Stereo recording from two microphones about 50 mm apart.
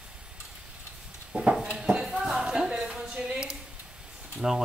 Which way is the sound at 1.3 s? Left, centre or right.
Centre.